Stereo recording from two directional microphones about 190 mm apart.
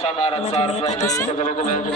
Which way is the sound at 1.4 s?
40° left (ahead or behind).